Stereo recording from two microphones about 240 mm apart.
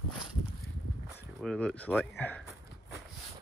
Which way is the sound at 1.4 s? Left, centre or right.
Centre.